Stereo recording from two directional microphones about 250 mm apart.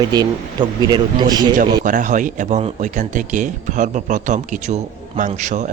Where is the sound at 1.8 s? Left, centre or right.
Right.